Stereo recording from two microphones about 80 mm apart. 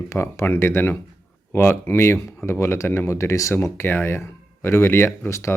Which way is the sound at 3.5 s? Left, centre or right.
Left.